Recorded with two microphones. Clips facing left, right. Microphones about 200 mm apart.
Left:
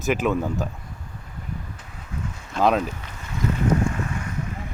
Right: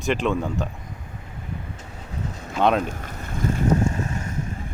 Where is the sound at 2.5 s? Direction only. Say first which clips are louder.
Even; centre (ahead or behind).